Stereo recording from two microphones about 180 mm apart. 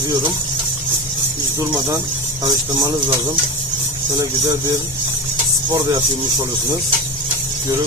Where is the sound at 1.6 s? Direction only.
15° right (ahead or behind).